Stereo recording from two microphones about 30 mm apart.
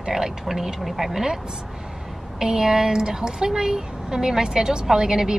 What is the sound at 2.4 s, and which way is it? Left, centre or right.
Speech, centre.